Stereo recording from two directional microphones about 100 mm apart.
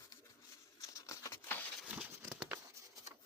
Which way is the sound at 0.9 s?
30° left (ahead or behind).